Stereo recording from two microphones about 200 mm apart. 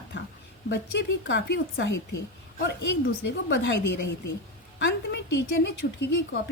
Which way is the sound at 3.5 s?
60° left (ahead or behind).